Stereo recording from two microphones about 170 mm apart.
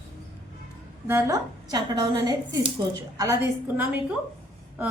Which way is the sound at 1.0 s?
15° right (ahead or behind).